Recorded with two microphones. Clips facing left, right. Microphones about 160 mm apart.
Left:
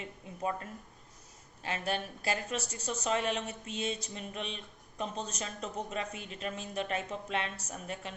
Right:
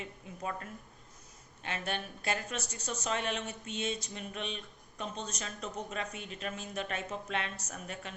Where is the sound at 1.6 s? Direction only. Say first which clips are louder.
Left 3 dB; 35° left (ahead or behind).